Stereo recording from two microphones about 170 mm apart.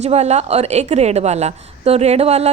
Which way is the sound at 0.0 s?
40° right (ahead or behind).